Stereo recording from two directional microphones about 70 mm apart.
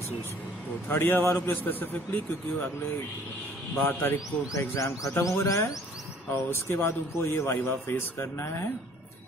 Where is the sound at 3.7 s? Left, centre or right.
Left.